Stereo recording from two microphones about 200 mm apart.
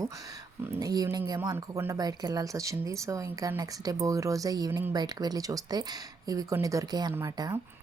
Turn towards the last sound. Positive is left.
turn(degrees=-15)  # may be behind; listen again after turning